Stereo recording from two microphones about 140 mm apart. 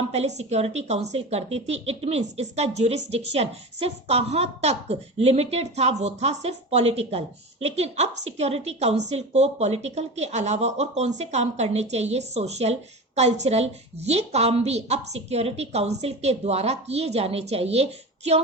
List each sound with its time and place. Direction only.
0.1 s a woman's voice: 50° right (ahead or behind)